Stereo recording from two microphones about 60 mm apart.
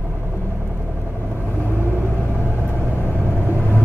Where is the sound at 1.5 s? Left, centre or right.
Left.